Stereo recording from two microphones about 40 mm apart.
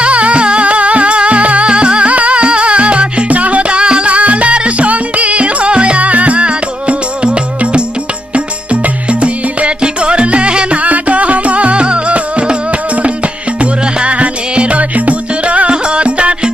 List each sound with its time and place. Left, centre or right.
0.0 s music: right
10.8 s music: right